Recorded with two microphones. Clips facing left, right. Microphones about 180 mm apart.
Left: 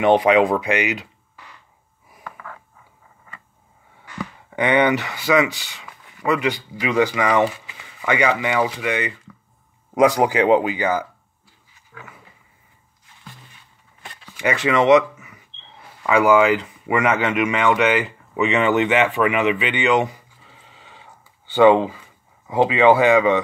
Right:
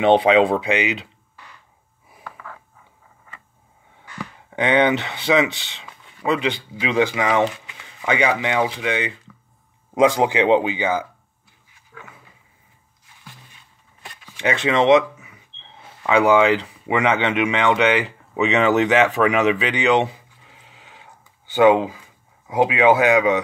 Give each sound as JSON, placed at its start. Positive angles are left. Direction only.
{"t": 0.1, "sound": "speech", "side_deg": -30}
{"t": 4.6, "sound": "speech", "side_deg": -25}
{"t": 7.2, "sound": "speech", "side_deg": 0}
{"t": 8.0, "sound": "speech", "side_deg": -20}
{"t": 14.5, "sound": "speech", "side_deg": -20}
{"t": 16.2, "sound": "speech", "side_deg": -30}
{"t": 20.4, "sound": "a sound", "side_deg": -10}
{"t": 22.5, "sound": "speech", "side_deg": -15}